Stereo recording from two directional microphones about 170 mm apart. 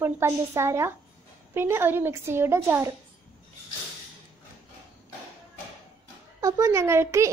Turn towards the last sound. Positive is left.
turn(degrees=-15)  # may be behind; listen again after turning